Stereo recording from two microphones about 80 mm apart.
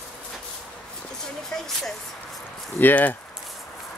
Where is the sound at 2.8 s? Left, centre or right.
Left.